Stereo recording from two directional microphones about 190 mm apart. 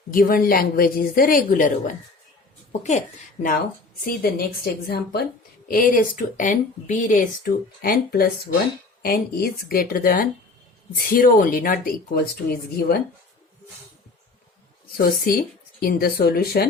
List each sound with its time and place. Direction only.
0.1 s a woman's voice: 50° left (ahead or behind)
4.0 s a woman's voice: 50° left (ahead or behind)
14.9 s a woman's voice: 50° left (ahead or behind)